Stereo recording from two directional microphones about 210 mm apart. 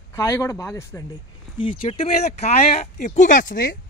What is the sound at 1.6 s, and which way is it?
A man's voice, 25° left (ahead or behind).